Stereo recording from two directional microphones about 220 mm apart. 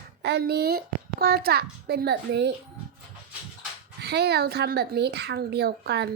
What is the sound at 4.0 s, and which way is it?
Speech, 50° right (ahead or behind).